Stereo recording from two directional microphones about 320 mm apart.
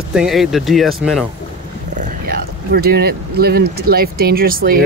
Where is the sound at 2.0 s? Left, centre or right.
Right.